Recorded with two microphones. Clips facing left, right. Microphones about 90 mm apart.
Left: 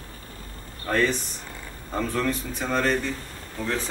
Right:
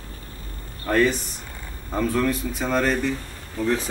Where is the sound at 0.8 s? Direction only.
5° right (ahead or behind).